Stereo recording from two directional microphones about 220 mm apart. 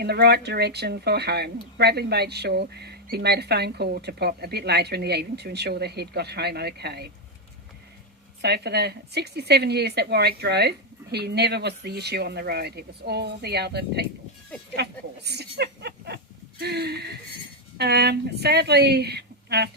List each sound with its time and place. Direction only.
0.0 s speech: 45° right (ahead or behind)
8.4 s speech: 50° right (ahead or behind)